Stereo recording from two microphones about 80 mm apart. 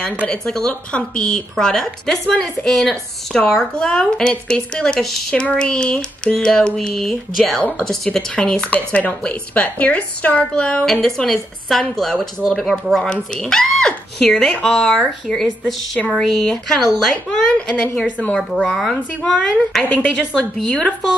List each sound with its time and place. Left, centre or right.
0.3 s a woman's voice: centre
10.9 s a woman's voice: centre
19.8 s a woman's voice: centre